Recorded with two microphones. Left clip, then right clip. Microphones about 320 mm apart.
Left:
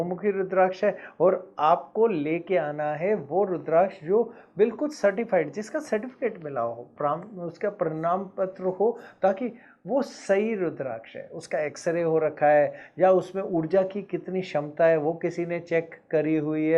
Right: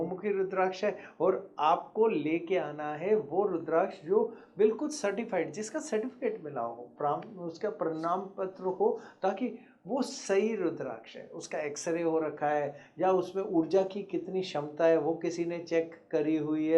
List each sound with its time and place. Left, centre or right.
0.2 s speech: left